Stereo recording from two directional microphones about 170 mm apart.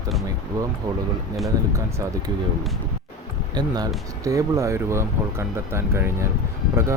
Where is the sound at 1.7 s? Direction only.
20° right (ahead or behind).